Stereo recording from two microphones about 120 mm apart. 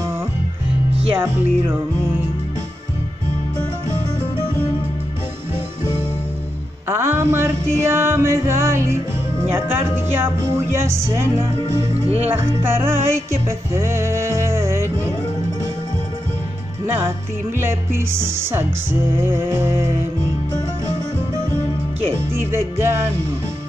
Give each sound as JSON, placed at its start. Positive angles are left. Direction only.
{"t": 1.1, "sound": "music", "side_deg": -15}
{"t": 6.9, "sound": "music", "side_deg": -20}
{"t": 9.4, "sound": "speech", "side_deg": -20}
{"t": 11.9, "sound": "speech", "side_deg": -60}
{"t": 12.3, "sound": "music", "side_deg": -20}
{"t": 16.8, "sound": "music", "side_deg": -20}
{"t": 17.6, "sound": "speech", "side_deg": -20}
{"t": 22.1, "sound": "music", "side_deg": -20}